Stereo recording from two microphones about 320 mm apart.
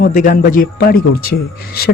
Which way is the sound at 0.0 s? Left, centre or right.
Left.